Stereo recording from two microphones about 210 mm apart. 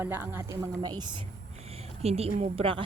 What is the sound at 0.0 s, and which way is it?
A woman's voice, 10° right (ahead or behind).